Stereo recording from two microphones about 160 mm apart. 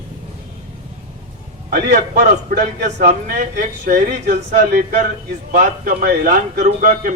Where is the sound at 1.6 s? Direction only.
60° right (ahead or behind).